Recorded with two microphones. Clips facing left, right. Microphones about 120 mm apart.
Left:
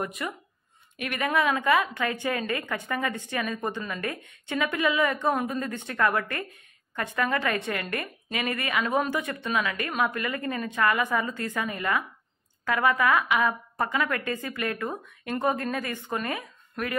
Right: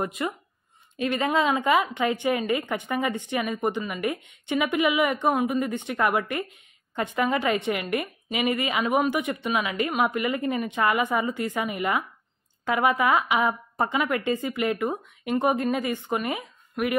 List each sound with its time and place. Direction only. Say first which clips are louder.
0.0 s a woman's voice: right 4 dB; 20° right (ahead or behind)